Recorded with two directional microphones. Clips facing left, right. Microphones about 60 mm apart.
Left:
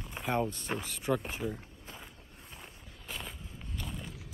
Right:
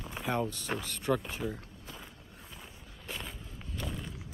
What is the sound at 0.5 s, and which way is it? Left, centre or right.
Speech, left.